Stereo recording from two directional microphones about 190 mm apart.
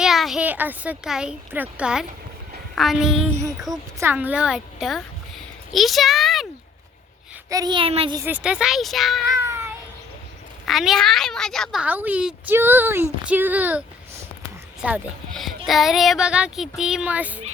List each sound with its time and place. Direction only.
0.0 s a child's voice: centre (ahead or behind)
7.5 s a child's voice: 20° right (ahead or behind)
8.2 s speech: 5° right (ahead or behind)
9.5 s a sound: 15° right (ahead or behind)
10.7 s speech: centre (ahead or behind)